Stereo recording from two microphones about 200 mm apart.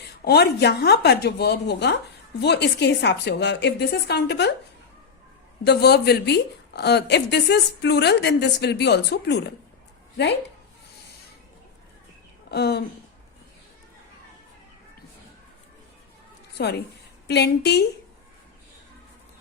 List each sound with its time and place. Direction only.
0.3 s a woman's voice: 55° left (ahead or behind)
5.6 s a woman's voice: 55° left (ahead or behind)
12.5 s speech: 55° left (ahead or behind)
16.6 s a woman's voice: 55° left (ahead or behind)